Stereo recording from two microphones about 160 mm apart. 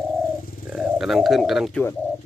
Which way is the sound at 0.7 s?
5° right (ahead or behind).